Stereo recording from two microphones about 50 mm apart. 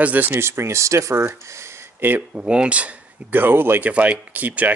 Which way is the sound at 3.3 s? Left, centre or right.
Right.